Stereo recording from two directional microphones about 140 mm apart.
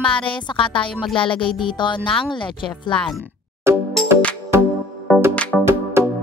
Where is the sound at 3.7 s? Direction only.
20° right (ahead or behind).